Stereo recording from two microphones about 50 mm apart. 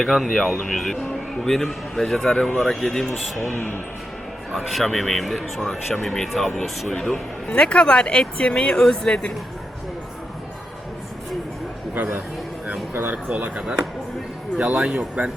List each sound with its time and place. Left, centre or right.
0.0 s a man's voice: centre
4.5 s speech: centre
5.5 s a man's voice: centre
7.4 s a man's voice: left
12.9 s speech: right
13.3 s speech: right